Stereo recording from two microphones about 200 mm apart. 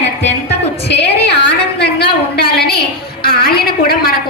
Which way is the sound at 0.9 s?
60° left (ahead or behind).